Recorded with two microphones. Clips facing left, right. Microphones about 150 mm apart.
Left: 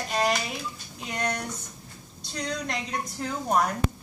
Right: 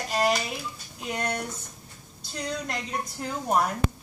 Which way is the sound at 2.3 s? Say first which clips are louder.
Left 1 dB; 5° right (ahead or behind).